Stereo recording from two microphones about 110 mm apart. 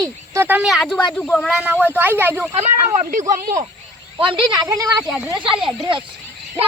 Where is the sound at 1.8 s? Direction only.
20° right (ahead or behind).